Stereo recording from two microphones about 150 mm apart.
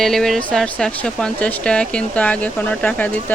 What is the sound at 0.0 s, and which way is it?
Speech, centre (ahead or behind).